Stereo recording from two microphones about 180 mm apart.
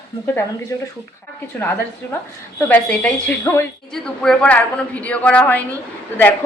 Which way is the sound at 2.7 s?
5° left (ahead or behind).